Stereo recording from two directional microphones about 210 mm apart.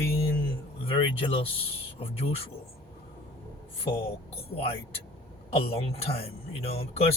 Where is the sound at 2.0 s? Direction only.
30° left (ahead or behind).